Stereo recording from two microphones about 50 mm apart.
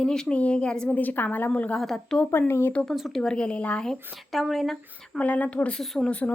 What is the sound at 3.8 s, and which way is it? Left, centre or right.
A woman's voice, centre.